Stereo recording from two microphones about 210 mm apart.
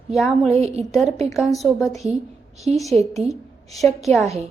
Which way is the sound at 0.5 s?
30° right (ahead or behind).